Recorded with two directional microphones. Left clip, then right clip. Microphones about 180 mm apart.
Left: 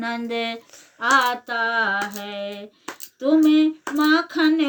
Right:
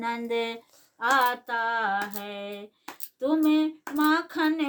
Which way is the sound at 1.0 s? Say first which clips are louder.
Left 5 dB; 20° right (ahead or behind).